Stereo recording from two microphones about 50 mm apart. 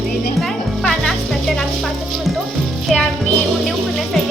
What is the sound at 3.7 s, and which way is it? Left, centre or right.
Speech, centre.